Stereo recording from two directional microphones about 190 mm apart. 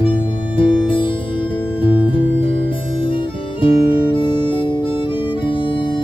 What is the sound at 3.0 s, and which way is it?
Music, 25° left (ahead or behind).